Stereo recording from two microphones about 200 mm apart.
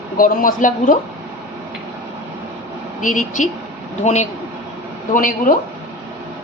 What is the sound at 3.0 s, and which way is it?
Speech, 40° left (ahead or behind).